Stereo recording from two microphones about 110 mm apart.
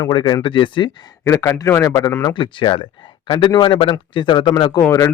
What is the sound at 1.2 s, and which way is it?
Speech, 25° left (ahead or behind).